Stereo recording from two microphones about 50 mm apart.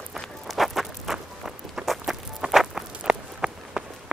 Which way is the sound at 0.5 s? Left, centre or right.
Centre.